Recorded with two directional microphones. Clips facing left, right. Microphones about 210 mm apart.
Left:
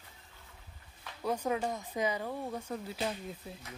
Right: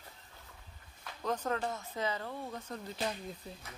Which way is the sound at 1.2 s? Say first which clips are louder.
Left 2 dB; 10° left (ahead or behind).